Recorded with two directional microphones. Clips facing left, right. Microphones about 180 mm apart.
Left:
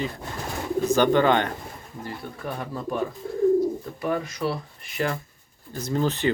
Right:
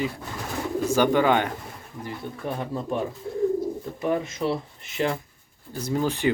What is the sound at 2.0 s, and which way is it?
Speech, 20° right (ahead or behind).